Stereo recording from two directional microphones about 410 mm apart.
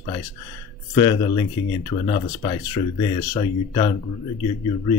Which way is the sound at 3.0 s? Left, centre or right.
Centre.